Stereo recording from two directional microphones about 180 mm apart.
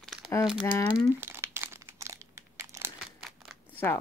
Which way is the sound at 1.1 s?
15° right (ahead or behind).